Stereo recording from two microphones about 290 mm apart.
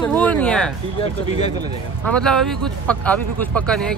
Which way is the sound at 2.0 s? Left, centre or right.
Centre.